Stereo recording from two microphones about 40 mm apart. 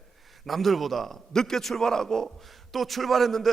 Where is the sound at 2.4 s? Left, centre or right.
Centre.